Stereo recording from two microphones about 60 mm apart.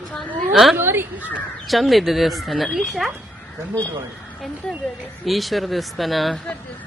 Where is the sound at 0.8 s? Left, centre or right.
Right.